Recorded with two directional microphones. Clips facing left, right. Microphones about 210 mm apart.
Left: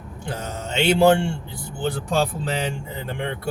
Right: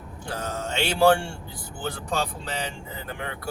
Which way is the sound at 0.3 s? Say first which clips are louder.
Left 1 dB; 20° left (ahead or behind).